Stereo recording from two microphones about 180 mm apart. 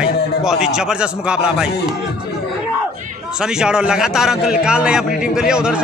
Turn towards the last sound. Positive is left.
turn(degrees=-5)  # may be behind; listen again after turning